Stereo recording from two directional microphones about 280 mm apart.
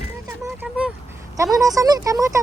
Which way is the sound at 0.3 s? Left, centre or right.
Centre.